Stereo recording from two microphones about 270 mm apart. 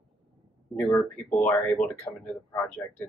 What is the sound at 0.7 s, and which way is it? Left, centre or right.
Speech, centre.